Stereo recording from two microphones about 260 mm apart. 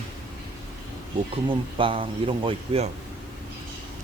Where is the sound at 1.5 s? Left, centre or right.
Centre.